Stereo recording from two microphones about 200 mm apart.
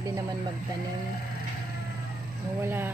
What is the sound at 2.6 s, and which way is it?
Speech, 10° right (ahead or behind).